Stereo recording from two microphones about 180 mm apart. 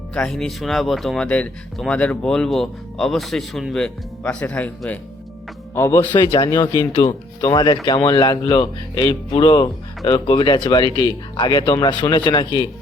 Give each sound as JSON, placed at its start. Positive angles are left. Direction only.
{"t": 0.1, "sound": "speech", "side_deg": 5}
{"t": 6.1, "sound": "speech", "side_deg": 25}